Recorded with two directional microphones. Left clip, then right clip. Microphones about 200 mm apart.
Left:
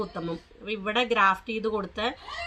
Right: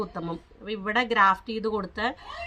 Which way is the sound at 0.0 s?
25° right (ahead or behind).